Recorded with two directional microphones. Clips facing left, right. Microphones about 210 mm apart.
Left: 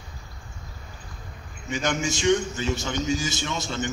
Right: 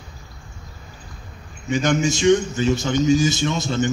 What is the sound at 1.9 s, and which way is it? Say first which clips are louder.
A man's voice: right 6 dB; 20° right (ahead or behind).